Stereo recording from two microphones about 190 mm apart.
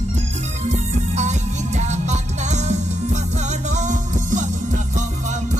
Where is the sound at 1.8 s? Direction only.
35° right (ahead or behind).